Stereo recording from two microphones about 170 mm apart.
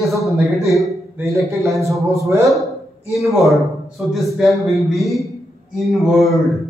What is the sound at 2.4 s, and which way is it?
A man's voice, centre (ahead or behind).